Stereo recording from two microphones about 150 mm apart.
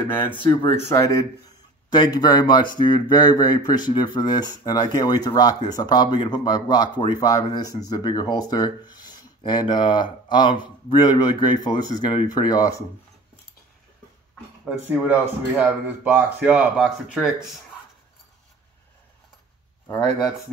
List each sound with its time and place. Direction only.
0.1 s speech: 15° left (ahead or behind)
14.6 s speech: 5° right (ahead or behind)